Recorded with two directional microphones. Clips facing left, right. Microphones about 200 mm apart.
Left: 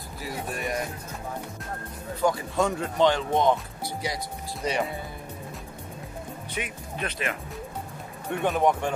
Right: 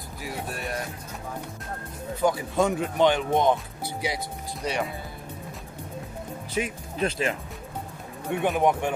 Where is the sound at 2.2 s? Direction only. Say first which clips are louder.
Right 1 dB; 20° right (ahead or behind).